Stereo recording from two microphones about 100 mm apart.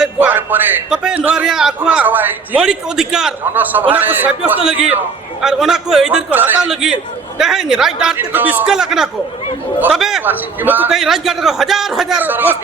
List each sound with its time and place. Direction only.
0.2 s music: 20° right (ahead or behind)
0.9 s a man's voice: 10° right (ahead or behind)
2.6 s a man's voice: 5° right (ahead or behind)
3.5 s a man's voice: 20° right (ahead or behind)
6.3 s a man's voice: 20° right (ahead or behind)
7.3 s a man's voice: 5° right (ahead or behind)
8.3 s a man's voice: 20° right (ahead or behind)
8.6 s a man's voice: 5° right (ahead or behind)
10.2 s a man's voice: 20° right (ahead or behind)
10.8 s a man's voice: 5° right (ahead or behind)
12.2 s a man's voice: 20° right (ahead or behind)